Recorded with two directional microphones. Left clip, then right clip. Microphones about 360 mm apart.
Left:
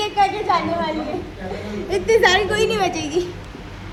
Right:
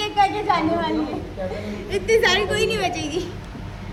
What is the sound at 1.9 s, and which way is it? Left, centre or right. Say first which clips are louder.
A woman's voice: left 3 dB; centre.